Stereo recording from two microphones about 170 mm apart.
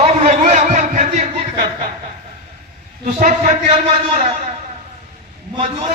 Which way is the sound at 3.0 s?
45° right (ahead or behind).